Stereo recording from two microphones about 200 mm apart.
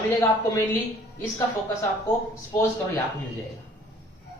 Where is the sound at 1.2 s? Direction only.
15° left (ahead or behind).